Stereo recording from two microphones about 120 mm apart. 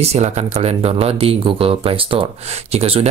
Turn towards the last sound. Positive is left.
turn(degrees=-55)  # may be behind; listen again after turning